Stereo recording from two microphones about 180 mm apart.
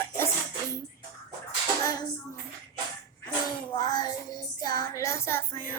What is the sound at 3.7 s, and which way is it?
Child singing, 20° left (ahead or behind).